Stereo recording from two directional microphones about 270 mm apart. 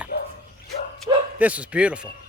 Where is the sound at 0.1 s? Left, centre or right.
Left.